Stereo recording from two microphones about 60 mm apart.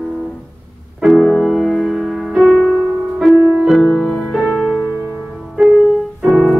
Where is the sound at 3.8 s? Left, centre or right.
Centre.